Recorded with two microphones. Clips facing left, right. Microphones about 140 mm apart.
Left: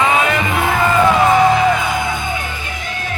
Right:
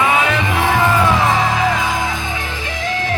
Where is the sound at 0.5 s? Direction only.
90° right.